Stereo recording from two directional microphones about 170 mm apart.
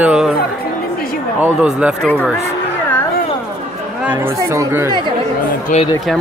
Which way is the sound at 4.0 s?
10° right (ahead or behind).